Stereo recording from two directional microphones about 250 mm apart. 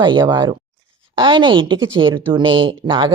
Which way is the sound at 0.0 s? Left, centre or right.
Centre.